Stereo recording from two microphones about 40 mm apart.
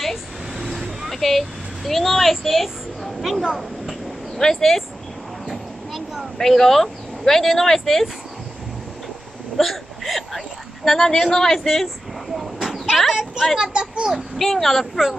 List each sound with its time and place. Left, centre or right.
0.6 s vehicle: centre
1.1 s speech: centre
5.5 s a sound: centre
6.4 s speech: centre
9.6 s speech: centre
11.0 s speech: centre
12.6 s a sound: centre
13.6 s a child's voice: right
14.4 s speech: centre